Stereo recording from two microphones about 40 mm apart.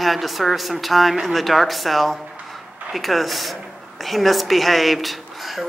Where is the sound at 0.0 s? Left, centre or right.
Centre.